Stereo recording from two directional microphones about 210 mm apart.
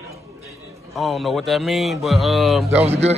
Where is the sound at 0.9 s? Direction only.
Centre (ahead or behind).